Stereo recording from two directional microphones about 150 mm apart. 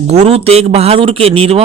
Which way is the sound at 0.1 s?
45° right (ahead or behind).